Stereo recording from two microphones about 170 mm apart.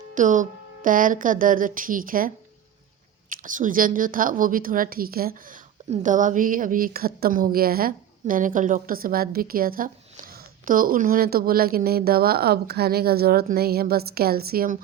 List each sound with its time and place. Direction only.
0.1 s music: 50° right (ahead or behind)
3.2 s a woman's voice: 50° right (ahead or behind)
5.9 s a woman's voice: 50° right (ahead or behind)